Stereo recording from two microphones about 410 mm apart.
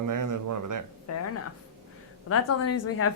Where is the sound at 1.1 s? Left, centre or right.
Left.